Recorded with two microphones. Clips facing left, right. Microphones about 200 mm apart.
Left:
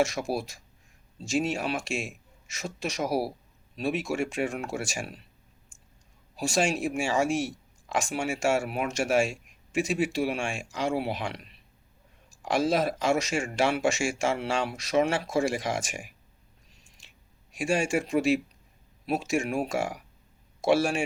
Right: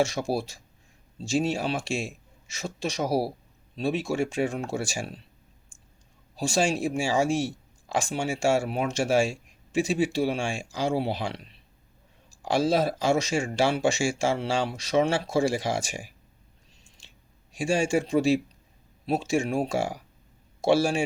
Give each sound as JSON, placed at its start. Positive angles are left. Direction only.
{"t": 0.0, "sound": "speech", "side_deg": -30}
{"t": 6.3, "sound": "speech", "side_deg": -30}
{"t": 17.5, "sound": "speech", "side_deg": -30}